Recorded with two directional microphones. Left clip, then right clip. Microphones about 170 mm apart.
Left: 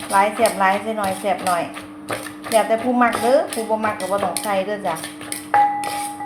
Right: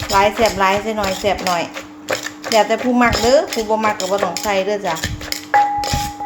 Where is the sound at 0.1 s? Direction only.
35° right (ahead or behind).